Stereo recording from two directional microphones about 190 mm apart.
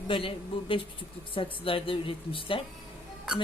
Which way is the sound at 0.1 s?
30° left (ahead or behind).